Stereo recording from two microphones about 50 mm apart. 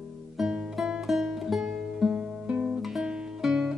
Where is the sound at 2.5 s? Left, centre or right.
Right.